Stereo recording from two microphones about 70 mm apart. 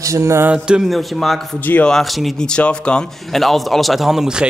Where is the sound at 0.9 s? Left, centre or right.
Centre.